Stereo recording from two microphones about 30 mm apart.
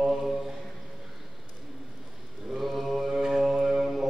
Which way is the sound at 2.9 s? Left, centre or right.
Centre.